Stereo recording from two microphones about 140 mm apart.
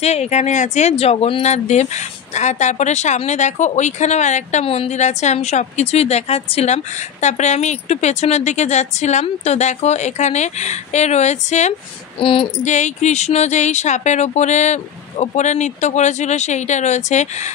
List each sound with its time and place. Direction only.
0.0 s speech: 50° left (ahead or behind)
12.2 s female singing: 40° left (ahead or behind)
12.6 s speech: 55° left (ahead or behind)